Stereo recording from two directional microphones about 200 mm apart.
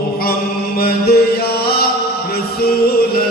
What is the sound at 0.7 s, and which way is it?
Music, 50° left (ahead or behind).